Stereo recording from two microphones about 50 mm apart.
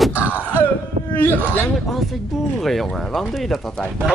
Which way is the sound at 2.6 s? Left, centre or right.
Centre.